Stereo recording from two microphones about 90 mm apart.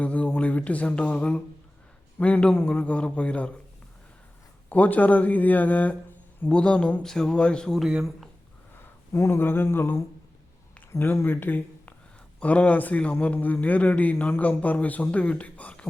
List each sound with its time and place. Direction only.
0.0 s a sound: 15° left (ahead or behind)
2.1 s a man's voice: 15° left (ahead or behind)
4.7 s a man's voice: 20° left (ahead or behind)
7.8 s speech: 10° right (ahead or behind)
9.1 s a man's voice: 30° left (ahead or behind)